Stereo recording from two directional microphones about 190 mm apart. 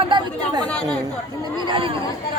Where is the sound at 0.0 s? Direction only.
25° right (ahead or behind).